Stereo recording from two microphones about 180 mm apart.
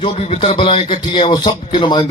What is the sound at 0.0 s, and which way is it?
Speech, 30° left (ahead or behind).